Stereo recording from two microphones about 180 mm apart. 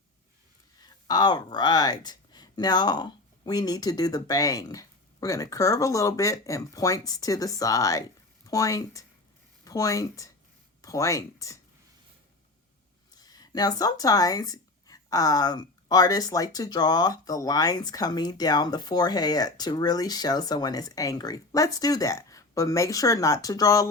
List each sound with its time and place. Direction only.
1.0 s speech: 25° left (ahead or behind)
13.1 s speech: 20° left (ahead or behind)